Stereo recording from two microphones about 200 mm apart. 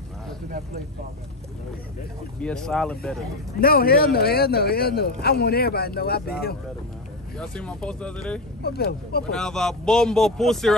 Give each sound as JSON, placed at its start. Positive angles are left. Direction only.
{"t": 2.4, "sound": "speech", "side_deg": 5}
{"t": 3.6, "sound": "a man's voice", "side_deg": 50}
{"t": 7.3, "sound": "speech", "side_deg": 5}
{"t": 8.6, "sound": "a man's voice", "side_deg": 50}
{"t": 9.3, "sound": "speech", "side_deg": 5}